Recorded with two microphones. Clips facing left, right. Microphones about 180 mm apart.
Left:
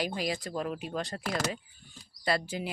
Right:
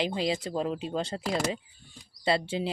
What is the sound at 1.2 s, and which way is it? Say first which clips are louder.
Speech: right 3 dB; 15° right (ahead or behind).